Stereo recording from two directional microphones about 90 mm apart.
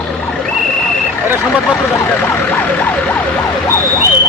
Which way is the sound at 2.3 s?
20° left (ahead or behind).